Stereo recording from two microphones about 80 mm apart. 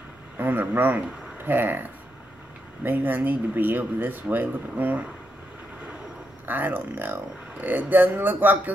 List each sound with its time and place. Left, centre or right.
0.4 s speech: right
6.4 s speech: right